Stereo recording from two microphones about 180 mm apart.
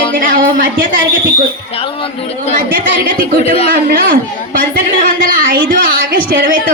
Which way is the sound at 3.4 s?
35° left (ahead or behind).